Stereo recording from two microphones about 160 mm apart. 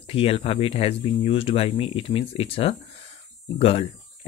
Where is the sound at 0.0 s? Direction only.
35° left (ahead or behind).